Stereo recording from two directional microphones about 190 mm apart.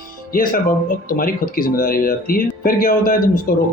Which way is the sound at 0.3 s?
50° left (ahead or behind).